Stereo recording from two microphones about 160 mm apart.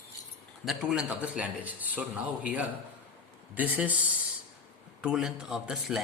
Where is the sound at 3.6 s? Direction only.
10° right (ahead or behind).